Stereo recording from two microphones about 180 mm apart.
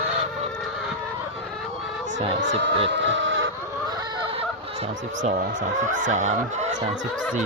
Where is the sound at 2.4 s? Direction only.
80° right.